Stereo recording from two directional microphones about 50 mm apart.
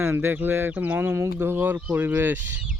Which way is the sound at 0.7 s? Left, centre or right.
Right.